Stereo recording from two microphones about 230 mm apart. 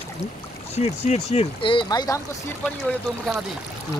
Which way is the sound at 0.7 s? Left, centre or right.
Left.